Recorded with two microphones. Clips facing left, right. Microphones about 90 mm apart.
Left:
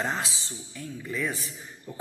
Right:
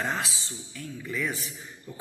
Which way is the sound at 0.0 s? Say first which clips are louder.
Even; 20° left (ahead or behind).